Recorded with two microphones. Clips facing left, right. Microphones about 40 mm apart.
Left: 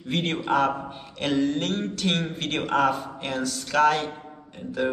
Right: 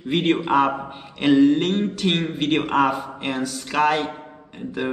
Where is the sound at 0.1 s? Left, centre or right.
Centre.